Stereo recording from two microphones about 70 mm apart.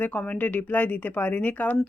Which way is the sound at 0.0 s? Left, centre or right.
Left.